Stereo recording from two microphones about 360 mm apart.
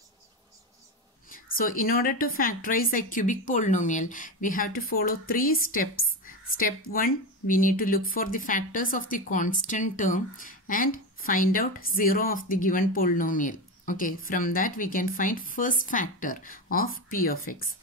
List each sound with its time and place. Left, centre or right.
1.3 s a woman's voice: left